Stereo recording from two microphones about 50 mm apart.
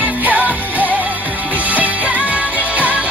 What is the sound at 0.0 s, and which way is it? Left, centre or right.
Music, right.